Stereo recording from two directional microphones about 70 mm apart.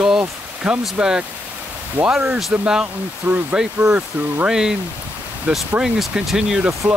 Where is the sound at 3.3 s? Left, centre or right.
Right.